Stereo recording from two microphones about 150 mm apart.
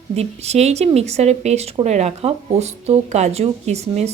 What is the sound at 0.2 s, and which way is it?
Speech, 45° right (ahead or behind).